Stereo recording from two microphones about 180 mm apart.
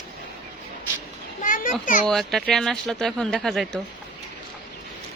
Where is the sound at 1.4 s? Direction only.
50° left (ahead or behind).